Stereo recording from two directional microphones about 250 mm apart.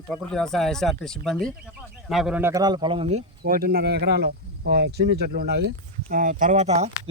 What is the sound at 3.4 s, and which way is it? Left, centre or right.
Speech, right.